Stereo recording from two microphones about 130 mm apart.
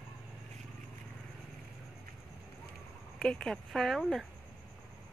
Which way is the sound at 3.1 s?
5° left (ahead or behind).